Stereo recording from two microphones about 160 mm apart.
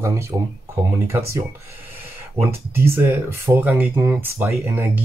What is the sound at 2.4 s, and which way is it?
Speech, 15° right (ahead or behind).